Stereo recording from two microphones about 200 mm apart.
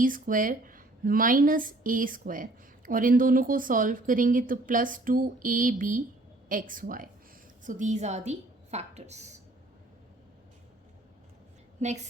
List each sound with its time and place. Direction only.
0.0 s a woman's voice: 40° right (ahead or behind)
11.8 s a woman's voice: 35° right (ahead or behind)